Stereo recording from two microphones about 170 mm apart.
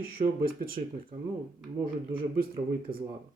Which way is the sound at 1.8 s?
60° right (ahead or behind).